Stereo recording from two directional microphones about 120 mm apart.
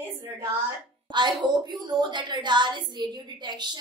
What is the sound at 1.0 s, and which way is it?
A woman's voice, 40° right (ahead or behind).